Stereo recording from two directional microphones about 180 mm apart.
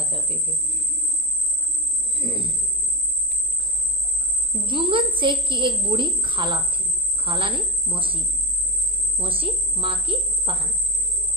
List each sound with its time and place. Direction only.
0.0 s cricket: 30° right (ahead or behind)
2.1 s speech: 30° right (ahead or behind)
4.6 s a woman's voice: 30° right (ahead or behind)